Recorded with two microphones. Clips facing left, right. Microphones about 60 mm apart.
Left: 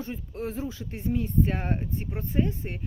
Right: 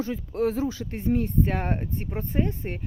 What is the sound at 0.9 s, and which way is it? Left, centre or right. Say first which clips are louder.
Speech: right 4 dB; right.